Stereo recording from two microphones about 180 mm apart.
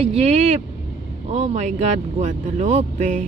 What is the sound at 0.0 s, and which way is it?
Speech, 35° right (ahead or behind).